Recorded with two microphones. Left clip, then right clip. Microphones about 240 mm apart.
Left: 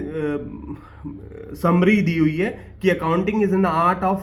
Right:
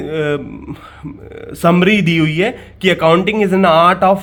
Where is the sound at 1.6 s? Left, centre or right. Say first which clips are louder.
Right 7 dB; right.